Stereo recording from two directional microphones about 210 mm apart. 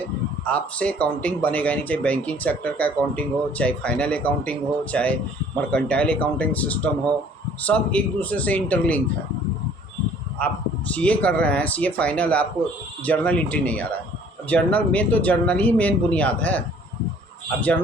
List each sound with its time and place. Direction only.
0.0 s speech: 5° left (ahead or behind)
10.9 s speech: 5° left (ahead or behind)